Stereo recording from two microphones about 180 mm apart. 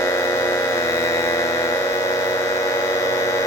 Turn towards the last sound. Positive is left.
turn(degrees=15)  # may be behind; listen again after turning